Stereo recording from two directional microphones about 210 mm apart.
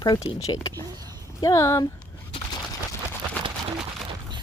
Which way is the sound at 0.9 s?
20° right (ahead or behind).